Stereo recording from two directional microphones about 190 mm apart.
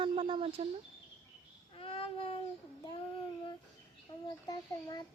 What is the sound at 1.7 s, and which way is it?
Speech, 30° left (ahead or behind).